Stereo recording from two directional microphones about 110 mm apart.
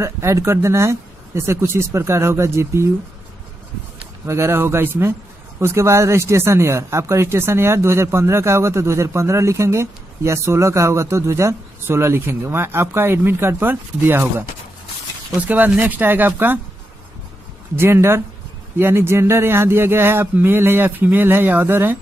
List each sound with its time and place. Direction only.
0.0 s speech: 25° right (ahead or behind)
4.3 s speech: 25° right (ahead or behind)
15.4 s speech: 15° right (ahead or behind)
17.7 s speech: 20° right (ahead or behind)